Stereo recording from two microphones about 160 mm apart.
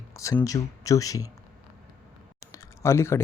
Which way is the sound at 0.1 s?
20° left (ahead or behind).